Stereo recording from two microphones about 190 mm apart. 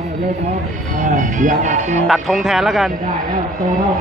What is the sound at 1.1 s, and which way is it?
Music, 40° right (ahead or behind).